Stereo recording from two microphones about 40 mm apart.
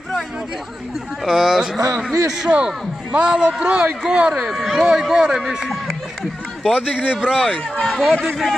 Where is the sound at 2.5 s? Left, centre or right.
Right.